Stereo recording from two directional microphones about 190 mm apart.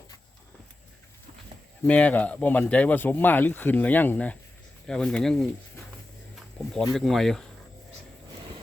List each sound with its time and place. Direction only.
1.9 s speech: 5° left (ahead or behind)
6.6 s a sound: 5° left (ahead or behind)
6.9 s speech: centre (ahead or behind)